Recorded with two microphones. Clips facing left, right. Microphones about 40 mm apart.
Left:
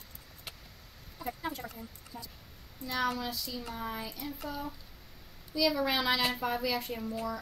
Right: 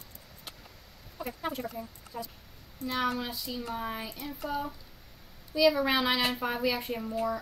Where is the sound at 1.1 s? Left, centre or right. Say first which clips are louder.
Right 3 dB; right.